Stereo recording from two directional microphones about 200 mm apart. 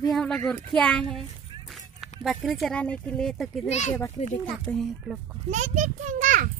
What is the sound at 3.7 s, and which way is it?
Speech, 35° left (ahead or behind).